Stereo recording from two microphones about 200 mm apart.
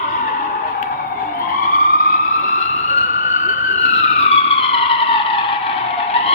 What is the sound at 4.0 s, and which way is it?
Vehicle, 30° left (ahead or behind).